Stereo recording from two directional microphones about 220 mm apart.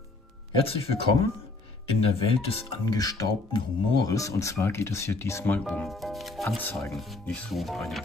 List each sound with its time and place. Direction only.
0.6 s speech: 25° left (ahead or behind); by 8.0 s centre (ahead or behind)